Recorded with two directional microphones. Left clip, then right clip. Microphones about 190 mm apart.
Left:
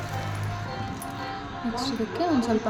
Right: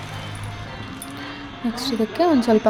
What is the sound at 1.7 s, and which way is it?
Speech, 40° right (ahead or behind).